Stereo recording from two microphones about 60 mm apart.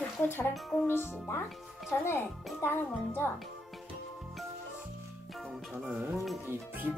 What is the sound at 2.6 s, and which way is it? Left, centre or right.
Speech, left.